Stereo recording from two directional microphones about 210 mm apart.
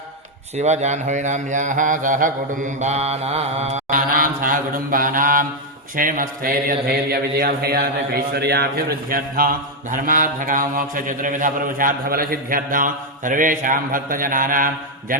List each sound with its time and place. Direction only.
0.5 s mantra: 35° right (ahead or behind)